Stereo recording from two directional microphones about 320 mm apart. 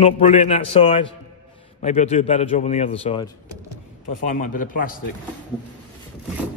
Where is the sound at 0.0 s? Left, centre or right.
Centre.